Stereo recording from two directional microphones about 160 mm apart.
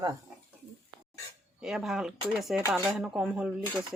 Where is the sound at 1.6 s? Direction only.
5° right (ahead or behind).